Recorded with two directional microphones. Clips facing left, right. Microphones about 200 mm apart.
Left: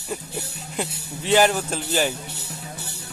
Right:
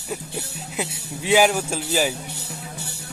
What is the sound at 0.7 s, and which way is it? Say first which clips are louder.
A man's voice: even; 5° right (ahead or behind).